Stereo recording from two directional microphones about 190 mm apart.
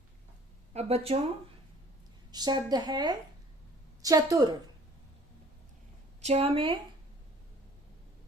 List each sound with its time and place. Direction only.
0.7 s speech: 35° right (ahead or behind)
2.3 s speech: 20° right (ahead or behind)
6.2 s speech: 30° right (ahead or behind)